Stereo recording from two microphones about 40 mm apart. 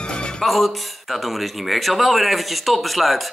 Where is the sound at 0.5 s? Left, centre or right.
Centre.